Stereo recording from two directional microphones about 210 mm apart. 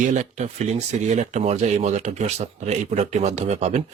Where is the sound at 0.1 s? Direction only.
35° right (ahead or behind).